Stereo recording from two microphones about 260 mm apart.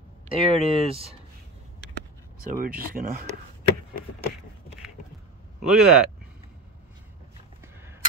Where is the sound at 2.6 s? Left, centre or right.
Right.